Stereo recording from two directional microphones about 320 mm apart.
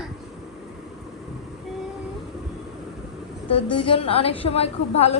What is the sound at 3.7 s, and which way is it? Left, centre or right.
A woman's voice, centre.